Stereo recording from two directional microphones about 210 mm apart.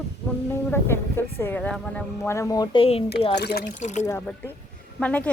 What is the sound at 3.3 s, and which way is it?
Speech, 50° left (ahead or behind).